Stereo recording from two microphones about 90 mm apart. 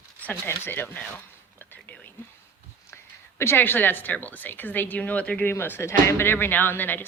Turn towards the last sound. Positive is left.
turn(degrees=20)  # may be behind; listen again after turning